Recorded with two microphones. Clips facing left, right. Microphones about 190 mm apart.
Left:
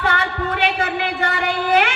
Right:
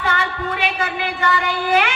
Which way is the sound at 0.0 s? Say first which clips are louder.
Left 1 dB; 60° left (ahead or behind).